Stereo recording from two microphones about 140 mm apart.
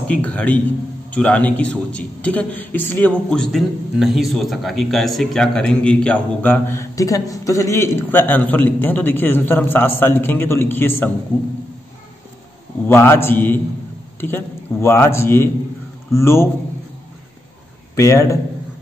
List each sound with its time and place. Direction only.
0.1 s a man's voice: 10° left (ahead or behind)
12.8 s a man's voice: 15° left (ahead or behind)
17.9 s a man's voice: 20° left (ahead or behind)